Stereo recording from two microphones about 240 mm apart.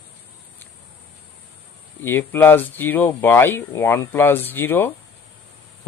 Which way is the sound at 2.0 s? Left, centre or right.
Centre.